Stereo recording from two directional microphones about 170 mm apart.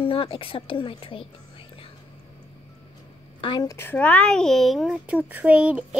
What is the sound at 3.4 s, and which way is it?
Speech, 25° left (ahead or behind).